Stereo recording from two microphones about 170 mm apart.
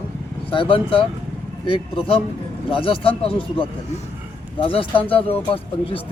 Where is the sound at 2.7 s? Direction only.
30° left (ahead or behind).